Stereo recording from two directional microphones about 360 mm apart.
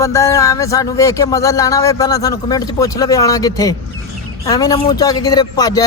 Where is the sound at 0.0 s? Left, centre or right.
Centre.